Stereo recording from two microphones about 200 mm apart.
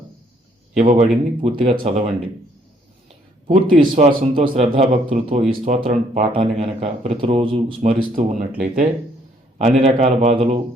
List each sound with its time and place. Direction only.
0.8 s a man's voice: 40° right (ahead or behind)
1.4 s a man's voice: 25° right (ahead or behind)
3.4 s a man's voice: 25° right (ahead or behind)
5.5 s a man's voice: 40° right (ahead or behind); by 7.9 s 25° right (ahead or behind)
7.9 s a man's voice: 40° right (ahead or behind)